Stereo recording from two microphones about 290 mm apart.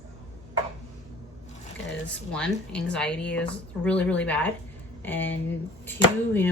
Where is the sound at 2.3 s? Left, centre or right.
Centre.